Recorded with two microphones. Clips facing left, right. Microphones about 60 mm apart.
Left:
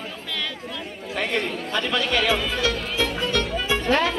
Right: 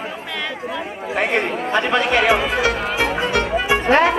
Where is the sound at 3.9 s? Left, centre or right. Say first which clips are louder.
Right 7 dB; right.